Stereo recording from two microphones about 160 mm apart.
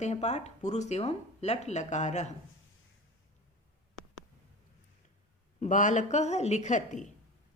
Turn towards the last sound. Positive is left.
turn(degrees=50)  # may be behind; listen again after turning